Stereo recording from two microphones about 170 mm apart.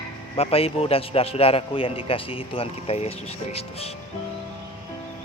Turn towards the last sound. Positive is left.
turn(degrees=35)  # may be behind; listen again after turning